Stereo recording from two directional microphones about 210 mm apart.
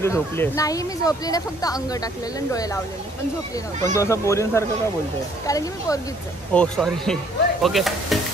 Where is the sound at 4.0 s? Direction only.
15° left (ahead or behind).